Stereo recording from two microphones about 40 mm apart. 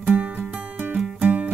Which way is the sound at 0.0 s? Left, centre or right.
Right.